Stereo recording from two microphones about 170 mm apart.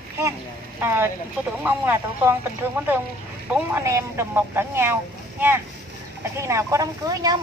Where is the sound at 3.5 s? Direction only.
15° right (ahead or behind).